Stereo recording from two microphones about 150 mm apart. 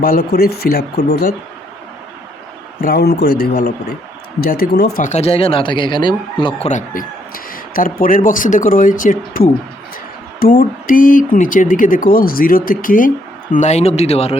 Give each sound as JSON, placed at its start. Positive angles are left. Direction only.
{"t": 0.0, "sound": "speech", "side_deg": 90}
{"t": 2.8, "sound": "speech", "side_deg": 90}
{"t": 5.0, "sound": "speech", "side_deg": 45}
{"t": 6.7, "sound": "a man's voice", "side_deg": 60}
{"t": 13.5, "sound": "speech", "side_deg": 50}